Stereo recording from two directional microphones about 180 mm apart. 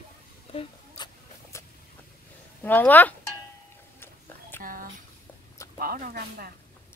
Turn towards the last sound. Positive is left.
turn(degrees=-55)  # may be behind; listen again after turning